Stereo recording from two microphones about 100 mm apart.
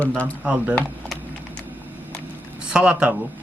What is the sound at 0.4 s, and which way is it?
Speech, 10° right (ahead or behind).